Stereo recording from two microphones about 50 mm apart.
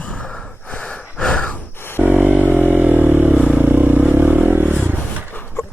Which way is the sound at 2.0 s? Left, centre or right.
Right.